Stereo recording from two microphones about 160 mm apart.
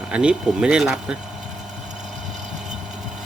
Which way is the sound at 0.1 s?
5° right (ahead or behind).